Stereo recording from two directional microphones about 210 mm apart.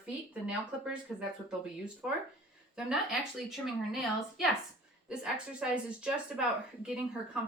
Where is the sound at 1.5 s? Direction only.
5° right (ahead or behind).